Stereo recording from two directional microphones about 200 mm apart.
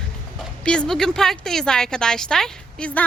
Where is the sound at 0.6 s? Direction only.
5° left (ahead or behind).